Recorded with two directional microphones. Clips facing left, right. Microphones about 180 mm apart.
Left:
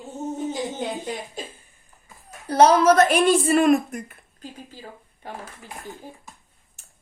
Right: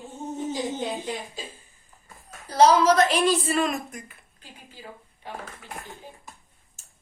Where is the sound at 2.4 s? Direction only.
60° left (ahead or behind).